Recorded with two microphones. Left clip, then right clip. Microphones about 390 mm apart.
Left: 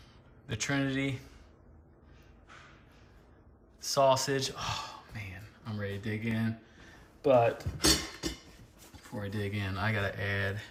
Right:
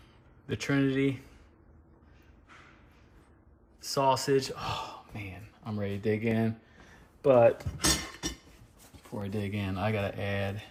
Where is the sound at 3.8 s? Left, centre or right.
Centre.